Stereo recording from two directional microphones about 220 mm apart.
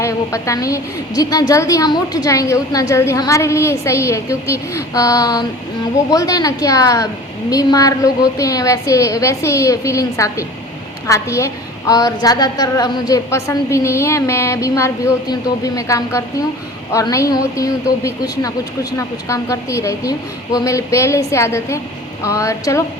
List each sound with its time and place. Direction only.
0.0 s a woman's voice: 15° left (ahead or behind)